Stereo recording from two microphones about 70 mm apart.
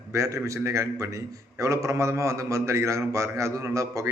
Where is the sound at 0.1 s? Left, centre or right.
Right.